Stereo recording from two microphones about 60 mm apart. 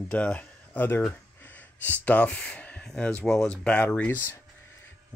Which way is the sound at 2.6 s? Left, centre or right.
Left.